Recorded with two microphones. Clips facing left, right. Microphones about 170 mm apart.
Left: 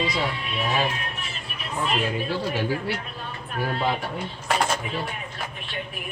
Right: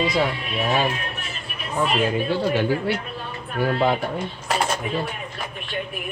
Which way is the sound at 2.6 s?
60° right (ahead or behind).